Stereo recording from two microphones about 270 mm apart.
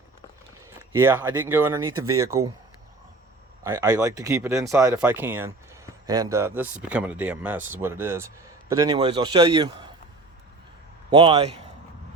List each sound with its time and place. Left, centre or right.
0.8 s speech: centre
3.6 s speech: centre
11.1 s a man's voice: centre